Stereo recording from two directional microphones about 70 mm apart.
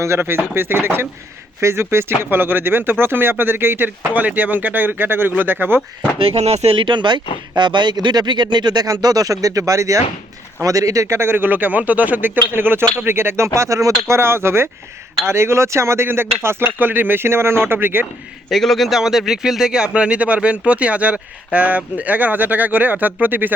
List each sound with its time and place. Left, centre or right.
0.2 s speech: right
6.9 s speech: right
18.4 s speech: centre; by 23.6 s right